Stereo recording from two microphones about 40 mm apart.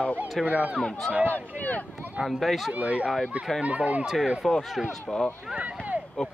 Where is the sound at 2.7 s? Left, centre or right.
Right.